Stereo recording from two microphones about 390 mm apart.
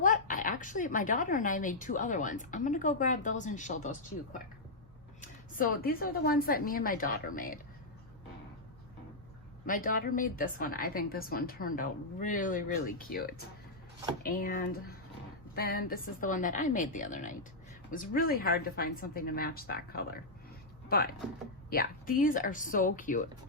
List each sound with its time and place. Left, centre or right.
0.0 s a woman's voice: centre
9.6 s a woman's voice: left